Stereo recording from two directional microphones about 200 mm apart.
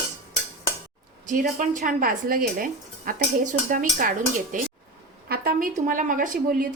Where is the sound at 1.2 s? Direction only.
40° right (ahead or behind).